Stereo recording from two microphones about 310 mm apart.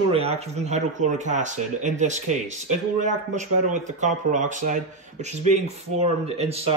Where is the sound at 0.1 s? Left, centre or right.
Centre.